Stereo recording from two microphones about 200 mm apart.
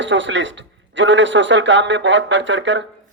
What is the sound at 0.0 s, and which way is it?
A man's voice, 65° right (ahead or behind).